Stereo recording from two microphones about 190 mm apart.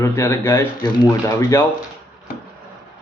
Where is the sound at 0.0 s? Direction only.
15° left (ahead or behind).